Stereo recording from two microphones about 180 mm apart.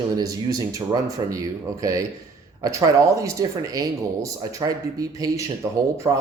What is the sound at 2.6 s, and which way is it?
Speech, 20° right (ahead or behind).